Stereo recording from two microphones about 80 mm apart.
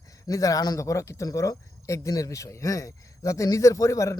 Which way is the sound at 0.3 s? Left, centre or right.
Left.